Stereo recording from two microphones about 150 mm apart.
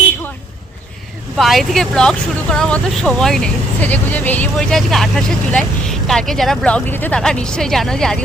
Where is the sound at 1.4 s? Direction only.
Centre (ahead or behind).